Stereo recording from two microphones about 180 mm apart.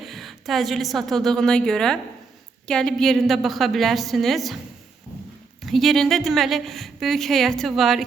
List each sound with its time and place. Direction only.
0.0 s a woman's voice: centre (ahead or behind)
5.6 s a woman's voice: centre (ahead or behind)